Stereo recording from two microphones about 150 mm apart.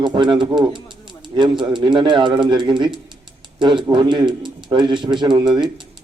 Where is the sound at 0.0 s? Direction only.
30° right (ahead or behind).